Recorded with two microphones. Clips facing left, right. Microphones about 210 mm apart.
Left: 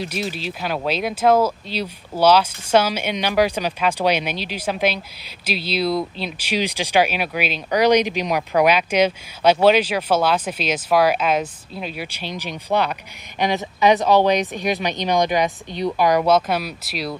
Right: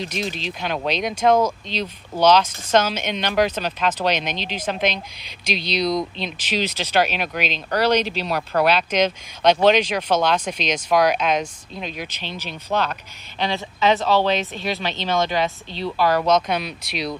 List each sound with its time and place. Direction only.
0.0 s speech: 10° left (ahead or behind)